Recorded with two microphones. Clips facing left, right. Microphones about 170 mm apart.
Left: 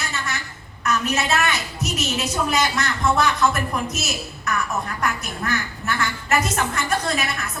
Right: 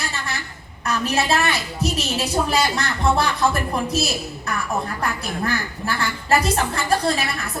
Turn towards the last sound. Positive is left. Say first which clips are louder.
# right 3 dB
turn(degrees=-30)  # may be behind; listen again after turning